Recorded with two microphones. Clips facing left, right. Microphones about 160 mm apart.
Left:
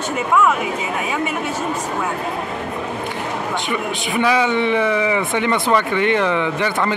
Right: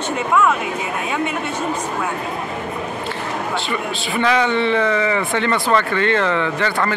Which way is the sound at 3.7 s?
15° left (ahead or behind).